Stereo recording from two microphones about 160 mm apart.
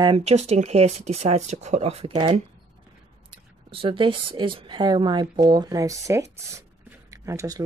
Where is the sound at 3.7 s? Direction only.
35° right (ahead or behind); by 6.4 s 20° right (ahead or behind).